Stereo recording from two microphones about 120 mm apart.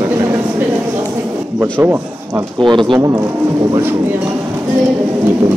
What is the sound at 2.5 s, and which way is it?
Speech, 45° right (ahead or behind).